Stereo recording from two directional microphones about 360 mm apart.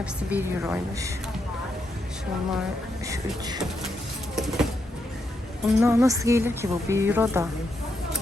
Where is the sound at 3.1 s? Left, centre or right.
Centre.